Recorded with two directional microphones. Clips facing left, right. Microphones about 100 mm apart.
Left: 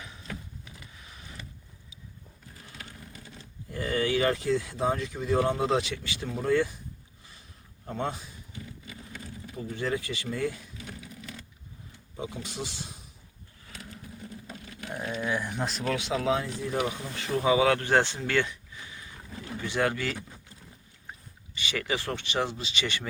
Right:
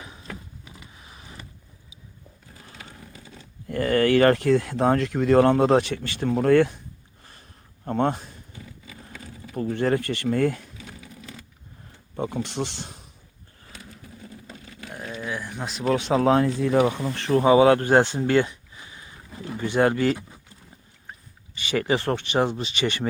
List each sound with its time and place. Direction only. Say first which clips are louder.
0.0 s a sound: right 2 dB; 30° right (ahead or behind)
3.7 s speech: right 8 dB; 65° right (ahead or behind)
7.9 s speech: right 9 dB; 55° right (ahead or behind)
9.6 s speech: right 8 dB; 60° right (ahead or behind)
12.1 s speech: right 8 dB; 60° right (ahead or behind)
14.5 s a sound: left 2 dB; centre (ahead or behind)
15.9 s speech: right 9 dB; 40° right (ahead or behind); by 17.4 s 60° right (ahead or behind)
17.4 s speech: right 7 dB; 35° right (ahead or behind)
19.5 s speech: right 7 dB; 50° right (ahead or behind)
19.8 s speech: right 8 dB; 35° right (ahead or behind)
21.7 s speech: right 8 dB; 40° right (ahead or behind)